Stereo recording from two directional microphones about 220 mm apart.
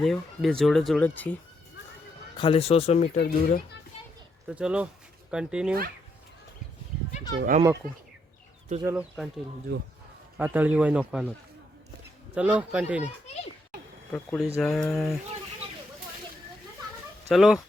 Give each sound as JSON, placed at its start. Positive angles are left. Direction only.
{"t": 0.0, "sound": "speech", "side_deg": 0}
{"t": 2.4, "sound": "speech", "side_deg": 25}
{"t": 3.2, "sound": "speech", "side_deg": 45}
{"t": 4.4, "sound": "speech", "side_deg": -5}
{"t": 7.3, "sound": "speech", "side_deg": -40}
{"t": 8.8, "sound": "speech", "side_deg": -10}
{"t": 9.7, "sound": "speech", "side_deg": -45}
{"t": 10.3, "sound": "speech", "side_deg": -5}
{"t": 12.3, "sound": "speech", "side_deg": -5}
{"t": 14.1, "sound": "speech", "side_deg": 0}
{"t": 17.2, "sound": "speech", "side_deg": 0}